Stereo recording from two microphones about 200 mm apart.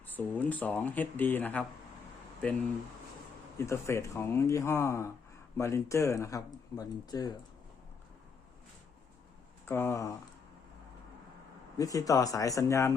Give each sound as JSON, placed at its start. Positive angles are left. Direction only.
{"t": 0.1, "sound": "speech", "side_deg": 10}
{"t": 9.6, "sound": "speech", "side_deg": 10}
{"t": 11.8, "sound": "speech", "side_deg": 15}